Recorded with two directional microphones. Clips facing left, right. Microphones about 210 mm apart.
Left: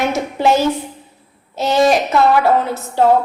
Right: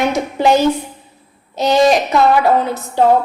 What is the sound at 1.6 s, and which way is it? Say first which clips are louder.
A woman's voice: right 2 dB; 5° left (ahead or behind).